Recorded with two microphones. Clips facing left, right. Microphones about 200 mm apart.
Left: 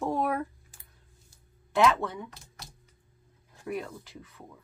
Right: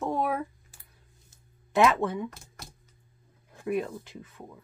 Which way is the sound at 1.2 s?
20° right (ahead or behind).